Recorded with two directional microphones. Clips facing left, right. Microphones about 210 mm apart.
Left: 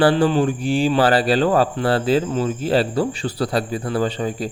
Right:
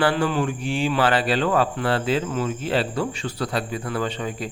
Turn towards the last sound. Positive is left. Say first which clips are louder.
# left 5 dB
turn(degrees=35)  # may be behind; listen again after turning